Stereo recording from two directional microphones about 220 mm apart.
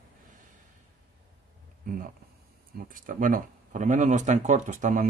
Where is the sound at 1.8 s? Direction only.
40° right (ahead or behind).